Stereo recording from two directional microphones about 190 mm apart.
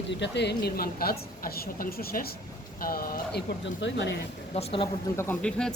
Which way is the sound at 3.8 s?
70° left (ahead or behind).